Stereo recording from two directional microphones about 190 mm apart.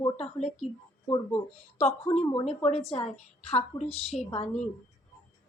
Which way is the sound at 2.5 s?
30° left (ahead or behind).